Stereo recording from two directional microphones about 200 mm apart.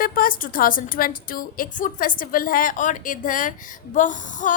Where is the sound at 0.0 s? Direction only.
45° left (ahead or behind).